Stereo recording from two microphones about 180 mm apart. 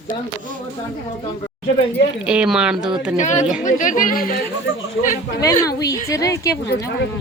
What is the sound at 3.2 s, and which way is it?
Speech, 40° left (ahead or behind).